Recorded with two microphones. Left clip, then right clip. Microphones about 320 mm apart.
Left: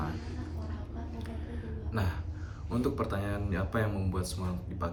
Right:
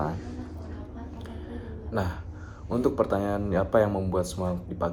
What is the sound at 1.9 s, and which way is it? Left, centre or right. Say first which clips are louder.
Speech: right 7 dB; centre.